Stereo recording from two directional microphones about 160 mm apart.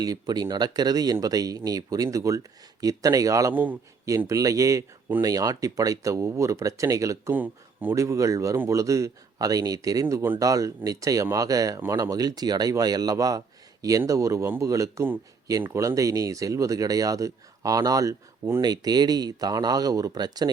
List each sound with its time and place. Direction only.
0.0 s speech: 25° right (ahead or behind)